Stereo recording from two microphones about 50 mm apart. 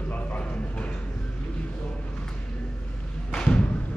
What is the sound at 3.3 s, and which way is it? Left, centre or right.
Thump, centre.